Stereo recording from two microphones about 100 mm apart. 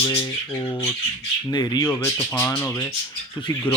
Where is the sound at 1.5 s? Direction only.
40° left (ahead or behind).